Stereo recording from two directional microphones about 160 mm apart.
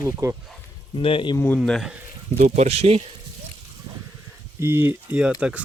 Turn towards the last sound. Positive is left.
turn(degrees=-5)  # may be behind; listen again after turning